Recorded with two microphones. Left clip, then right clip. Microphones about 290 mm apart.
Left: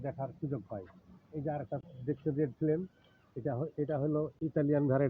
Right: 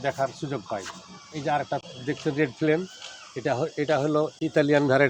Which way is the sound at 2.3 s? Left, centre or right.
Centre.